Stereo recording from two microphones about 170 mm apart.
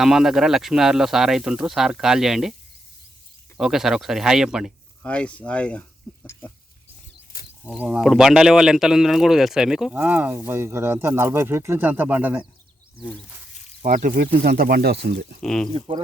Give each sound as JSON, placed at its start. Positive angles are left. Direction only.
{"t": 0.0, "sound": "speech", "side_deg": -5}
{"t": 3.6, "sound": "speech", "side_deg": 0}
{"t": 5.0, "sound": "speech", "side_deg": 5}
{"t": 6.1, "sound": "a sound", "side_deg": 5}
{"t": 7.6, "sound": "speech", "side_deg": -5}
{"t": 13.8, "sound": "speech", "side_deg": -50}
{"t": 14.3, "sound": "speech", "side_deg": -60}
{"t": 15.4, "sound": "speech", "side_deg": 5}
{"t": 15.7, "sound": "speech", "side_deg": -30}